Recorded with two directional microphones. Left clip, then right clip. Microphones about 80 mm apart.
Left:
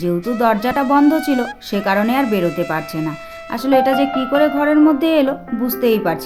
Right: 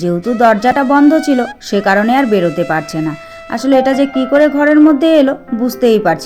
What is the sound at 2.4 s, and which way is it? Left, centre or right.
Speech, centre.